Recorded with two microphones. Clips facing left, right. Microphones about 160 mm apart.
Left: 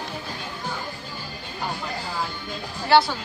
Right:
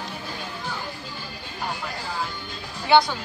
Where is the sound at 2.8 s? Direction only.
5° left (ahead or behind).